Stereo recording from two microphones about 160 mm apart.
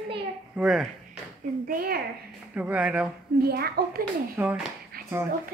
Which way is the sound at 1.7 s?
65° right (ahead or behind).